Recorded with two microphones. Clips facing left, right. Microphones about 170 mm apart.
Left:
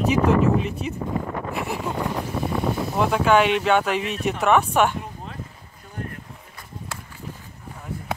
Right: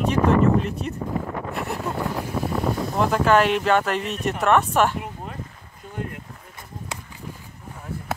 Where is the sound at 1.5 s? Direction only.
Centre (ahead or behind).